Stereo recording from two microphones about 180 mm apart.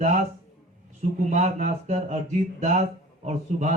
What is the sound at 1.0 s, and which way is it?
Speech, 40° right (ahead or behind).